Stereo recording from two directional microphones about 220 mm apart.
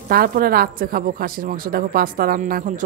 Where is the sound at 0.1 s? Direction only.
45° right (ahead or behind).